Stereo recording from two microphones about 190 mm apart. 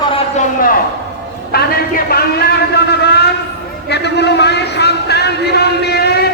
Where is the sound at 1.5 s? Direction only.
55° left (ahead or behind).